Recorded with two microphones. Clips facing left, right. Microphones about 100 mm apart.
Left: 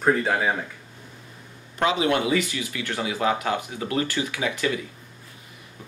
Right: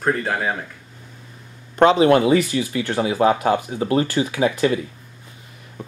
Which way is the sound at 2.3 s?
30° right (ahead or behind).